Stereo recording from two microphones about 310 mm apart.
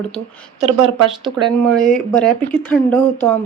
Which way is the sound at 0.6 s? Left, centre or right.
Centre.